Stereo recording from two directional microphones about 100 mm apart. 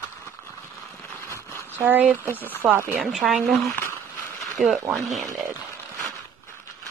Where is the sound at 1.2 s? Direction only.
25° left (ahead or behind).